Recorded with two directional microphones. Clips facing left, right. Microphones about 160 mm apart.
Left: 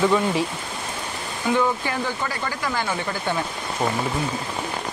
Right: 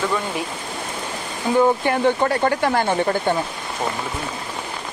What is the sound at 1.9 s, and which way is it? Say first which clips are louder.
Speech: right 9 dB; 60° right (ahead or behind).